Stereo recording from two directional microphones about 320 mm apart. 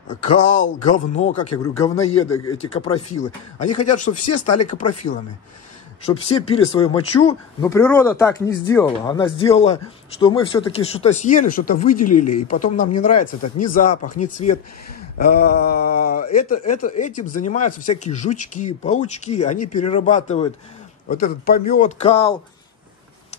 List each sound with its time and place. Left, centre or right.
0.4 s speech: left
3.5 s speech: left
6.2 s speech: centre
11.9 s speech: left
12.5 s speech: left
13.2 s speech: left
14.3 s speech: left